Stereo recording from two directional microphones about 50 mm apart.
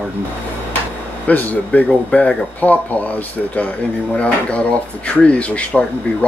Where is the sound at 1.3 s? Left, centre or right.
Left.